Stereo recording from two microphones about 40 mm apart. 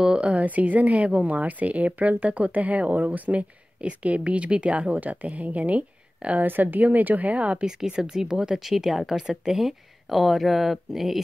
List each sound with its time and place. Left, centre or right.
0.0 s speech: right
6.4 s a woman's voice: right
7.8 s speech: centre